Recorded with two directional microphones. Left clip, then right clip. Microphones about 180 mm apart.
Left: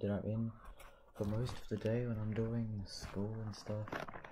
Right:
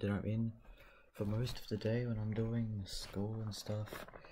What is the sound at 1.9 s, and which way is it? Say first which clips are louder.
Speech: left 1 dB; centre (ahead or behind).